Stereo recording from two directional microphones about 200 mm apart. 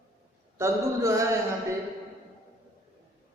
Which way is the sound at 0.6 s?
15° right (ahead or behind).